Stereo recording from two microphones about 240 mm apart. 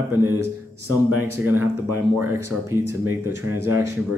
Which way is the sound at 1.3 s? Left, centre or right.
Centre.